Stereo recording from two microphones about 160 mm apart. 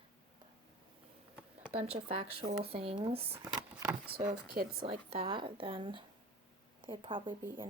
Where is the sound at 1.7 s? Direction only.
40° right (ahead or behind).